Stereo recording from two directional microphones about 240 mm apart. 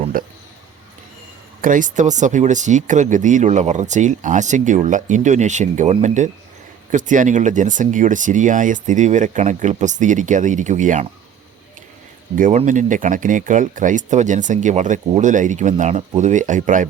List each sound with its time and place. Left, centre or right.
0.1 s a sound: right
1.6 s speech: right
12.4 s speech: right